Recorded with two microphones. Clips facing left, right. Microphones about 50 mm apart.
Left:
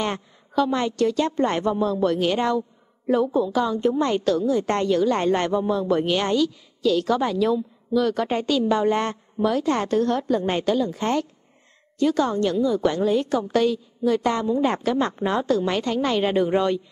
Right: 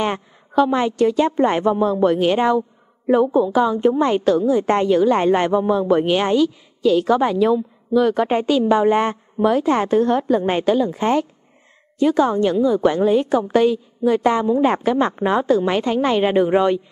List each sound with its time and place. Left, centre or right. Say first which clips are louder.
0.0 s a woman's voice: right 5 dB; centre